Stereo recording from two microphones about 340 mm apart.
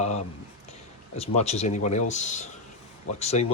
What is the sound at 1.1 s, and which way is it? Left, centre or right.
Speech, centre.